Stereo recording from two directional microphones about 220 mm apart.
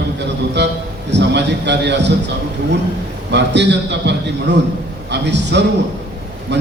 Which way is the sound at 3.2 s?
50° right (ahead or behind).